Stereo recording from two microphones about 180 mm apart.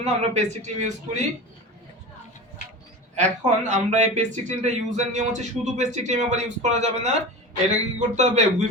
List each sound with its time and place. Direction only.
0.0 s speech: 40° right (ahead or behind)
3.2 s speech: 40° right (ahead or behind)